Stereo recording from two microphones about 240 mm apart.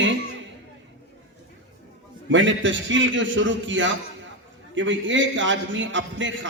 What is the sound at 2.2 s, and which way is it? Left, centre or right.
A man's voice, right.